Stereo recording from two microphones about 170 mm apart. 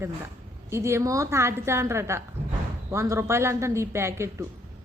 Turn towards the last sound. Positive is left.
turn(degrees=-15)  # may be behind; listen again after turning